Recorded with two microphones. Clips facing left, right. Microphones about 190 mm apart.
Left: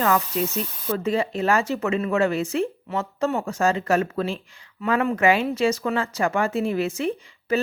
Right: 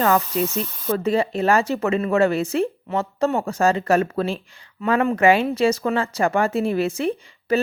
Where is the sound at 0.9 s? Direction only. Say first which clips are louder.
Right 3 dB; 35° right (ahead or behind).